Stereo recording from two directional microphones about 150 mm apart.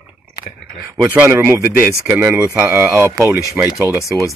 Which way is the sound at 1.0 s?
10° right (ahead or behind).